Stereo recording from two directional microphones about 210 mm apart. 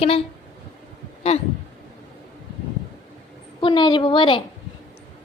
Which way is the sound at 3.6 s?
25° left (ahead or behind).